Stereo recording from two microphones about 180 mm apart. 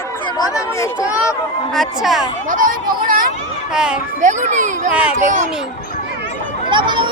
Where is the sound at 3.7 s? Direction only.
5° right (ahead or behind).